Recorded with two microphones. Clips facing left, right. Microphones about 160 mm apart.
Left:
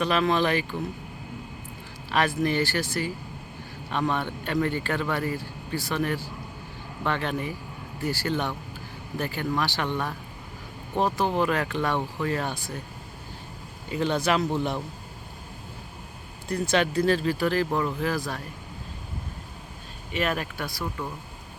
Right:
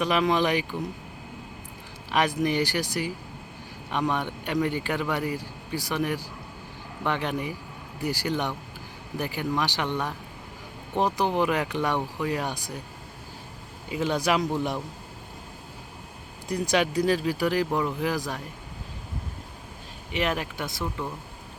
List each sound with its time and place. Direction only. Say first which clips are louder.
0.0 s speech: even; 15° right (ahead or behind)
2.0 s speech: even; 15° right (ahead or behind)
13.9 s speech: even; 10° right (ahead or behind)
16.5 s speech: even; 15° right (ahead or behind)
20.1 s speech: even; 15° right (ahead or behind)